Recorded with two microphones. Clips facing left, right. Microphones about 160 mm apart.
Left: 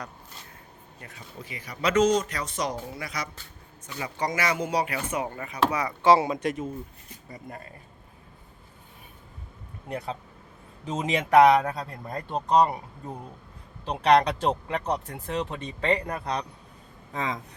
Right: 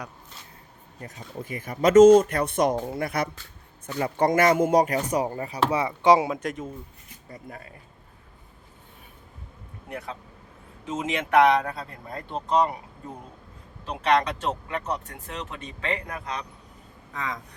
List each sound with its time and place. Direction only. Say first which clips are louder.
1.0 s speech: right 7 dB; 45° right (ahead or behind); by 6.3 s 15° right (ahead or behind)
6.3 s speech: left 2 dB; centre (ahead or behind)
10.8 s speech: left 1 dB; 35° left (ahead or behind)
13.8 s speech: left 3 dB; 35° left (ahead or behind)
17.2 s speech: left 2 dB; 25° left (ahead or behind)